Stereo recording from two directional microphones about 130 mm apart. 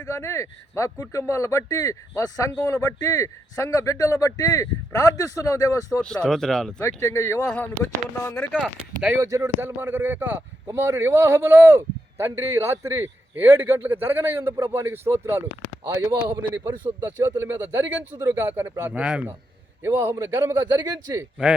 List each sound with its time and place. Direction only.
0.0 s a man's voice: 20° left (ahead or behind)
6.0 s speech: 5° left (ahead or behind)
6.8 s a man's voice: 20° left (ahead or behind)
7.4 s speech: 10° left (ahead or behind)
8.2 s a man's voice: 20° left (ahead or behind)
8.5 s a man's voice: 5° right (ahead or behind)
9.1 s speech: 25° right (ahead or behind)
15.8 s a man's voice: 30° right (ahead or behind)
16.6 s a man's voice: 20° right (ahead or behind)
19.8 s a man's voice: 20° right (ahead or behind)
20.6 s a man's voice: 35° right (ahead or behind)